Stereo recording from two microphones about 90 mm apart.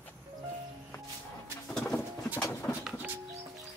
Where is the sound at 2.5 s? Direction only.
20° left (ahead or behind).